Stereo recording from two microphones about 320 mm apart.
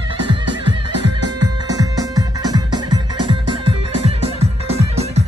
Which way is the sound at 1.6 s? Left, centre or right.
Centre.